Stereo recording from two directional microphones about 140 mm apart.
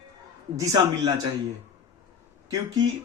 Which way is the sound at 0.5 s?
25° right (ahead or behind).